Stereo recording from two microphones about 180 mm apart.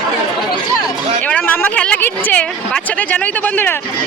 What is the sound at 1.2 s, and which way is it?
A woman's voice, 10° left (ahead or behind).